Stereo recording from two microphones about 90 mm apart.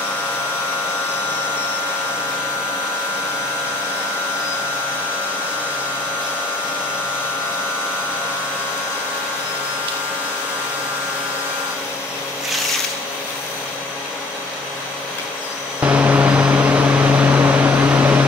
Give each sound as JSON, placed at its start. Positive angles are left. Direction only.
{"t": 15.8, "sound": "vehicle", "side_deg": -15}